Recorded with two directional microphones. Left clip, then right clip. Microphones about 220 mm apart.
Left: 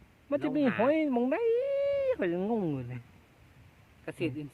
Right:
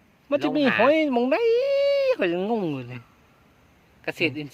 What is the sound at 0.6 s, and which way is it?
Speech, 30° right (ahead or behind).